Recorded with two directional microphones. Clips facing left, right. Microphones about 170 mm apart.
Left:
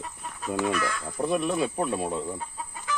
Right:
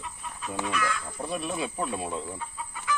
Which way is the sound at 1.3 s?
55° left (ahead or behind).